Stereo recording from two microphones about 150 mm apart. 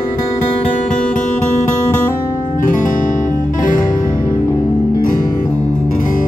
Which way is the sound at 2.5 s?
60° left (ahead or behind).